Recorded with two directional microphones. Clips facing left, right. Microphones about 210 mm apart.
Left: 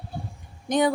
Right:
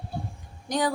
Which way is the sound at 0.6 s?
20° left (ahead or behind).